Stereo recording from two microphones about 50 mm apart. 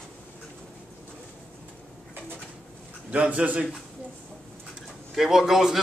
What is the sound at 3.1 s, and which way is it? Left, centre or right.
Speech, right.